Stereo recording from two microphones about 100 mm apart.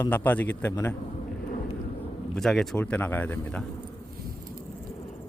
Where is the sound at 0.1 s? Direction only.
20° left (ahead or behind).